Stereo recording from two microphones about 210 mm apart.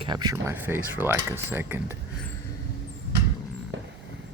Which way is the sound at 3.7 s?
60° right (ahead or behind).